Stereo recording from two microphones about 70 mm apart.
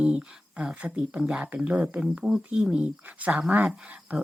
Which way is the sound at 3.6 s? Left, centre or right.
Centre.